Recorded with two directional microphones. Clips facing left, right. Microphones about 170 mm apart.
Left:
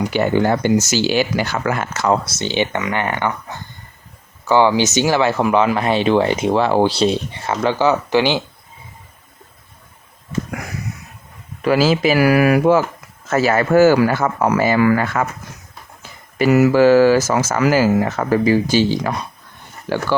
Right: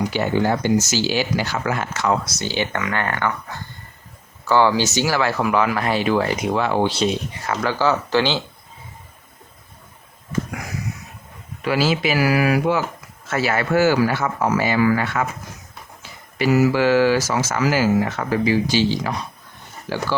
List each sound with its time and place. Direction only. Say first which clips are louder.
0.1 s speech: left 4 dB; 55° left (ahead or behind)
2.0 s speech: left 5 dB; 30° left (ahead or behind); by 8.4 s 15° left (ahead or behind)
11.6 s speech: left 5 dB; 40° left (ahead or behind)
16.4 s speech: left 4 dB; 60° left (ahead or behind)
16.7 s speech: left 6 dB; 40° left (ahead or behind); by 20.0 s 60° left (ahead or behind)